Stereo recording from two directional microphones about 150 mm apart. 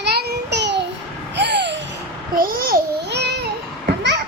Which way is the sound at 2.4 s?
70° right (ahead or behind).